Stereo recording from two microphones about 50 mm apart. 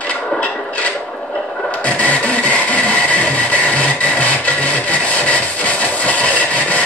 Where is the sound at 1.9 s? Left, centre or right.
Left.